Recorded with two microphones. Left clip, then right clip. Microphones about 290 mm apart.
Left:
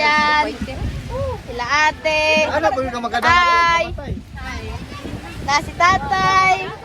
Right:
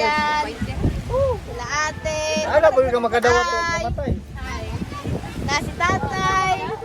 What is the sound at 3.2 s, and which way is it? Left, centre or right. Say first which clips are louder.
Child singing: left 8 dB; centre.